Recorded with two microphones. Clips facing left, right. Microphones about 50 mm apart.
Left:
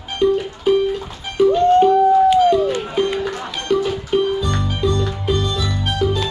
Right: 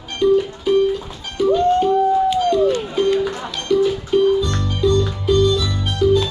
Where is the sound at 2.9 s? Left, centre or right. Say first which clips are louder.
Right 2 dB; centre.